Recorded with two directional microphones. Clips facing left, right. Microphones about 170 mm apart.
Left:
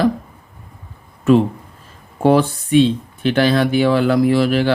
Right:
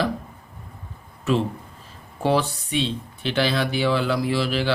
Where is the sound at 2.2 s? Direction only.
50° left (ahead or behind).